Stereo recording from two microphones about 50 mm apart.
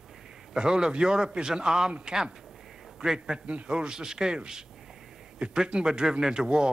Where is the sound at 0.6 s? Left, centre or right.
Centre.